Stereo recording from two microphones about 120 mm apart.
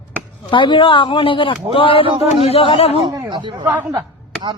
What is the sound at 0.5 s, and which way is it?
Speech, 45° left (ahead or behind).